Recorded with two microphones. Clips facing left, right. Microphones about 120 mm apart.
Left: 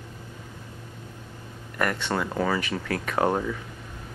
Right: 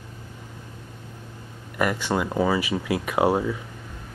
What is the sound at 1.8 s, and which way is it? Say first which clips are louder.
Speech: right 3 dB; 10° right (ahead or behind).